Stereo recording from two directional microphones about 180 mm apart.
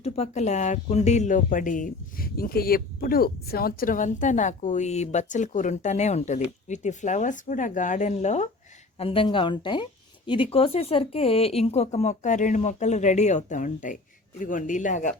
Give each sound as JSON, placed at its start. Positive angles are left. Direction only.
{"t": 0.0, "sound": "a woman's voice", "side_deg": 35}